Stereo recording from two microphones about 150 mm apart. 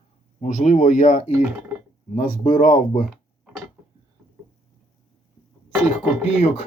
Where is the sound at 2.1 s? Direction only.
65° left (ahead or behind).